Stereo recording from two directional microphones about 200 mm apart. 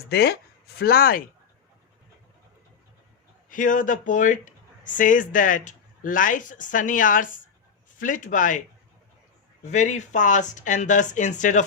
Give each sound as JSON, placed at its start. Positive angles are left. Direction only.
{"t": 0.1, "sound": "speech", "side_deg": 55}
{"t": 3.5, "sound": "speech", "side_deg": 40}
{"t": 9.6, "sound": "speech", "side_deg": 35}